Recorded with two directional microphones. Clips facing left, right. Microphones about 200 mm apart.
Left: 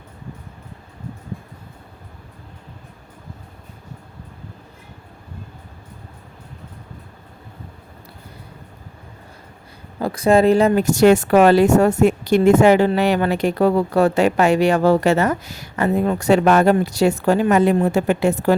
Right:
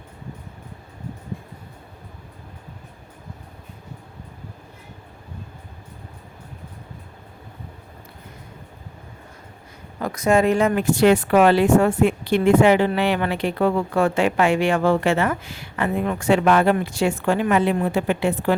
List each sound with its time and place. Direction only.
10.0 s a woman's voice: 30° left (ahead or behind)